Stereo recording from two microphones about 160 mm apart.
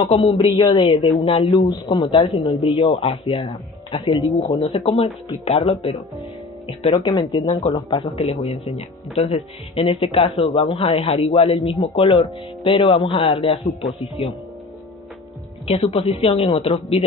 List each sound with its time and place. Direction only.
0.0 s speech: 35° left (ahead or behind)
2.7 s speech: 35° left (ahead or behind)
7.2 s speech: 30° left (ahead or behind)
15.7 s speech: 40° left (ahead or behind)